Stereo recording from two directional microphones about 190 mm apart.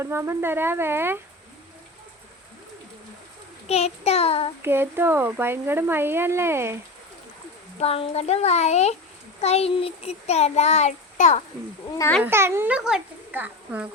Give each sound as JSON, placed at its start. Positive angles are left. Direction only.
{"t": 0.0, "sound": "speech", "side_deg": -15}
{"t": 3.7, "sound": "child singing", "side_deg": 30}
{"t": 4.6, "sound": "speech", "side_deg": -10}
{"t": 7.8, "sound": "child singing", "side_deg": 30}
{"t": 11.9, "sound": "a child's voice", "side_deg": 10}
{"t": 12.2, "sound": "speech", "side_deg": -15}